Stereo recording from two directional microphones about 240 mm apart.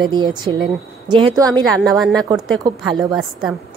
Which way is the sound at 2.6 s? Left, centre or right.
Centre.